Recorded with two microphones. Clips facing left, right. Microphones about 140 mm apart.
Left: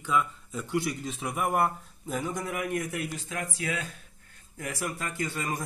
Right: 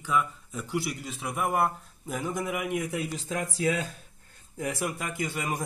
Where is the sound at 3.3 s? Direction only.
35° right (ahead or behind).